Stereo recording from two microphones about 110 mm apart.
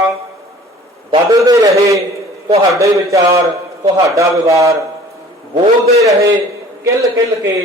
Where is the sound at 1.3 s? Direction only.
30° right (ahead or behind).